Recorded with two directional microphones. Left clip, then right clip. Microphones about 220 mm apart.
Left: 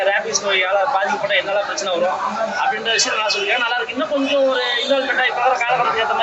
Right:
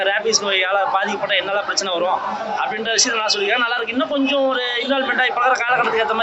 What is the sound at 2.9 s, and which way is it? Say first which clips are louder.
A man's voice: even; 50° right (ahead or behind).